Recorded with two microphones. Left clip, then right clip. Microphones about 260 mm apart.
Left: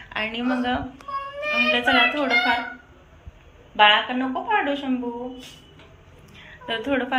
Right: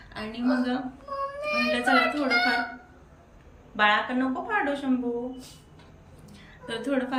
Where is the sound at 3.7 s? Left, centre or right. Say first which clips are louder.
Left 6 dB; centre.